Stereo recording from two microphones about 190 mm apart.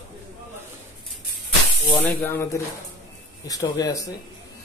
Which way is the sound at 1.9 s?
10° left (ahead or behind).